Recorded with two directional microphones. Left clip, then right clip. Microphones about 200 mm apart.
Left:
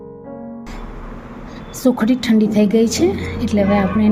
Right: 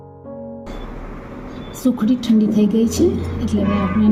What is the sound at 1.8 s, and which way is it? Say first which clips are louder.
A woman's voice: left 3 dB; 40° left (ahead or behind).